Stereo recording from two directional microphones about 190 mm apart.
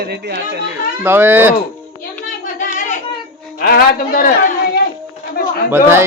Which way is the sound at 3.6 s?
50° left (ahead or behind).